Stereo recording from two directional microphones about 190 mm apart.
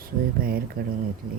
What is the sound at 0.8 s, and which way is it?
Speech, 50° right (ahead or behind).